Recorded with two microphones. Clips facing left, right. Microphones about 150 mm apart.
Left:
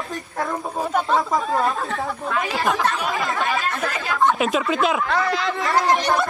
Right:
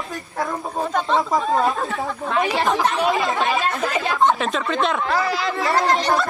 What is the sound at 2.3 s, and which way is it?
Speech, 20° right (ahead or behind).